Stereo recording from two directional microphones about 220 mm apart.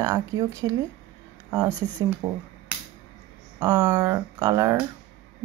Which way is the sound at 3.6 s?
15° right (ahead or behind).